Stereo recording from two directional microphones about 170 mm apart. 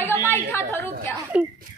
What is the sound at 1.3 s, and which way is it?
Speech, 5° right (ahead or behind).